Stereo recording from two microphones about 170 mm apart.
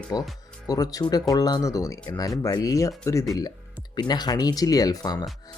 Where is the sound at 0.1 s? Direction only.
20° left (ahead or behind).